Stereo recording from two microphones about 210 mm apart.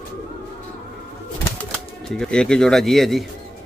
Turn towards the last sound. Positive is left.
turn(degrees=0)  # may be behind; listen again after turning